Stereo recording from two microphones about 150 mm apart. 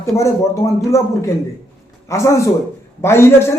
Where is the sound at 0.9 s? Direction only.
20° left (ahead or behind).